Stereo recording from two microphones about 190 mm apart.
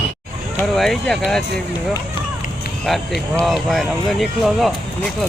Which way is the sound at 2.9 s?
Centre (ahead or behind).